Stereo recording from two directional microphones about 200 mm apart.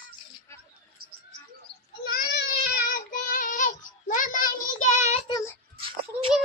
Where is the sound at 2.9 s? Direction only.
40° left (ahead or behind).